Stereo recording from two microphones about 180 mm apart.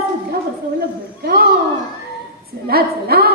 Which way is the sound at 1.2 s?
60° right (ahead or behind).